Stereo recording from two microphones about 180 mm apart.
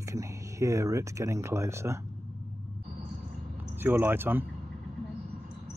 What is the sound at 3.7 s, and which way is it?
Speech, 10° right (ahead or behind).